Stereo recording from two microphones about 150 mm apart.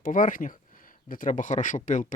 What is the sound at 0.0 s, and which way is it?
Speech, 60° left (ahead or behind).